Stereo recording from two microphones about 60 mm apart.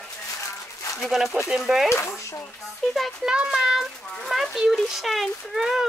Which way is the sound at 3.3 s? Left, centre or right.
Centre.